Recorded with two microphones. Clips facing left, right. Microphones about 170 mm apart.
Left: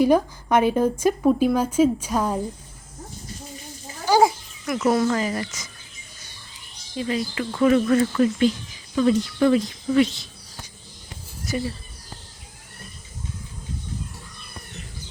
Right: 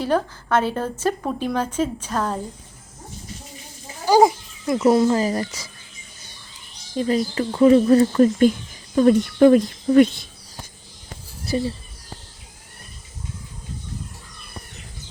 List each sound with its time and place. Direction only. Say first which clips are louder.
0.0 s a woman's voice: left 4 dB; 15° left (ahead or behind)
4.6 s speech: right 4 dB; 25° right (ahead or behind)
6.9 s speech: right 5 dB; 40° right (ahead or behind)
7.5 s speech: right 4 dB; 25° right (ahead or behind); by 10.7 s 55° right (ahead or behind)
11.4 s speech: right 4 dB; 30° right (ahead or behind)